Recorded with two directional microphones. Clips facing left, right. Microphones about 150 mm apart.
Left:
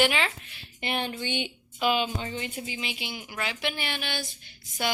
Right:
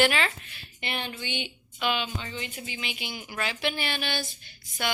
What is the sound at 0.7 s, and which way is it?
Speech, 45° left (ahead or behind).